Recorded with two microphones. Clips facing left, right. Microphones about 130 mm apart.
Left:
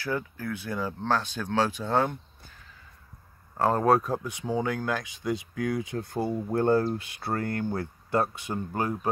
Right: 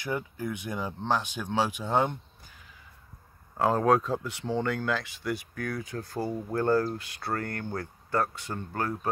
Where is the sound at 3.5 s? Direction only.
Centre (ahead or behind).